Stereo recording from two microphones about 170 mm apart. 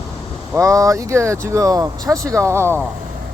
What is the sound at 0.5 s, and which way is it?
Speech, 20° right (ahead or behind).